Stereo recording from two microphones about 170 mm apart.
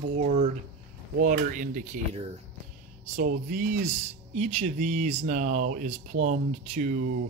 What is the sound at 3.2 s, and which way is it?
Speech, 50° right (ahead or behind).